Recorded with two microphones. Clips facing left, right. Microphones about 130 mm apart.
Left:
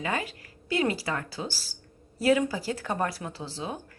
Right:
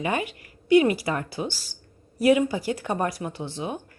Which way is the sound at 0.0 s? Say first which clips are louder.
Right 4 dB; 20° right (ahead or behind).